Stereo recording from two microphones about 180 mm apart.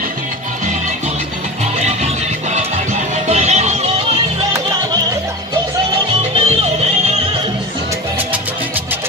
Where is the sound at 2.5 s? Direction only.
40° right (ahead or behind).